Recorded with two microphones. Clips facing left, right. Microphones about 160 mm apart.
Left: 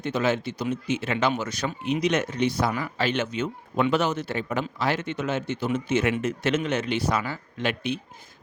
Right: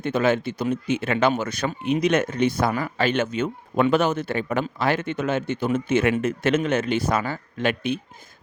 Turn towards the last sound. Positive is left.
turn(degrees=-50)  # may be behind; listen again after turning